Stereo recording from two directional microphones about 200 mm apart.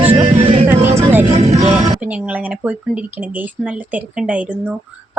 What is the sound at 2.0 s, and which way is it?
A woman's voice, 5° right (ahead or behind).